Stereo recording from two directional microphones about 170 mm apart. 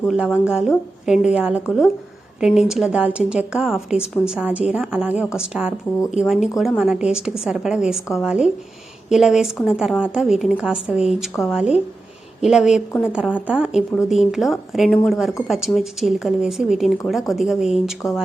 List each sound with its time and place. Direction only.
0.1 s a woman's voice: 5° right (ahead or behind)